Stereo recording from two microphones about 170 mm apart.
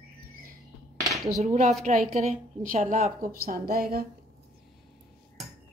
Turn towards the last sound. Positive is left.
turn(degrees=-60)  # may be behind; listen again after turning